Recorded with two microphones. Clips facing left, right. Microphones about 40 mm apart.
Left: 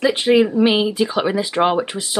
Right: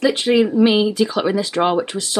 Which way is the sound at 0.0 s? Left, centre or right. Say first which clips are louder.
Left 1 dB; centre.